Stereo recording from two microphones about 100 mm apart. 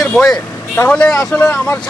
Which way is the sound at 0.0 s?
5° left (ahead or behind).